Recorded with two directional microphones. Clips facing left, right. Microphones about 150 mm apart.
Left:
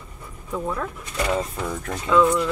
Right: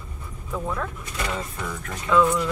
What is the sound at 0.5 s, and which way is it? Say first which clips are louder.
Speech: left 2 dB; 10° left (ahead or behind).